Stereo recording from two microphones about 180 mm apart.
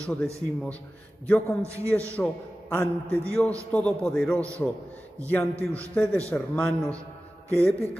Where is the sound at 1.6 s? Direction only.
15° right (ahead or behind).